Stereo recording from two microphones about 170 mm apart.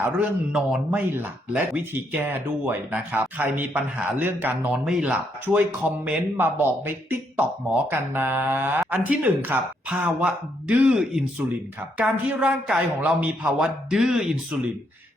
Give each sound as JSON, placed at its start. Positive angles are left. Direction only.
{"t": 0.0, "sound": "speech", "side_deg": -5}